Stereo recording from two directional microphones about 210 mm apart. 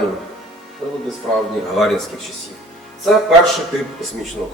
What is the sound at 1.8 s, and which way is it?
Speech, centre (ahead or behind).